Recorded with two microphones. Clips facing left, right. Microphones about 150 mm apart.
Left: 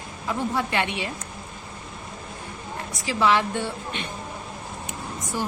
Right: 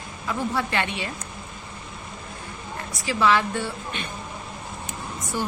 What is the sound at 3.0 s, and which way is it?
A woman's voice, 20° left (ahead or behind).